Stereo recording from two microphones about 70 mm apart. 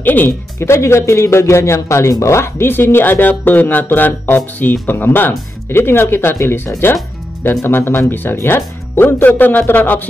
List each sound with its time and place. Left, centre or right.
0.0 s speech: left